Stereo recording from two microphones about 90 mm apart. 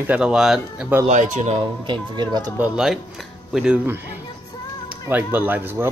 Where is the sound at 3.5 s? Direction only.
10° right (ahead or behind).